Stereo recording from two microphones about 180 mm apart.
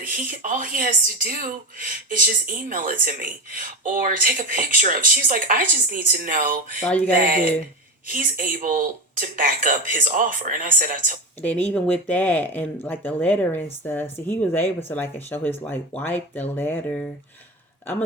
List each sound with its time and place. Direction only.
0.0 s speech: 50° right (ahead or behind)
6.8 s speech: 5° left (ahead or behind)
7.2 s speech: 55° right (ahead or behind)
11.4 s speech: 10° left (ahead or behind)